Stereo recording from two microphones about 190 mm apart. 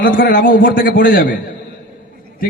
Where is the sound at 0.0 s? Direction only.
45° left (ahead or behind).